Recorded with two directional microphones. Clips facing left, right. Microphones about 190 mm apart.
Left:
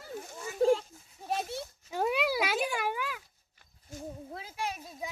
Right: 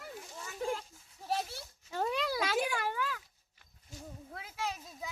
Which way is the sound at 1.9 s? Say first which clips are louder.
Left 4 dB; 10° left (ahead or behind).